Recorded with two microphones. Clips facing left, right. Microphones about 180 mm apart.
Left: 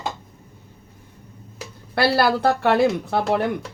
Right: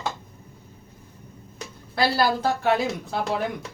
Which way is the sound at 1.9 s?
70° left (ahead or behind).